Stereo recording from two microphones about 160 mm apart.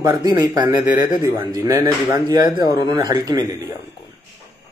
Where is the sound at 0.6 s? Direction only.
55° left (ahead or behind).